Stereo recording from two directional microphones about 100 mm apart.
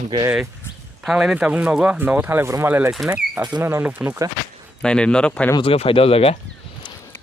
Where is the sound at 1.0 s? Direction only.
5° right (ahead or behind); by 2.7 s 25° right (ahead or behind).